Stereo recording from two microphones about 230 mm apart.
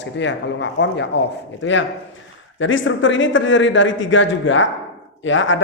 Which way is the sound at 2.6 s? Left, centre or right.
Left.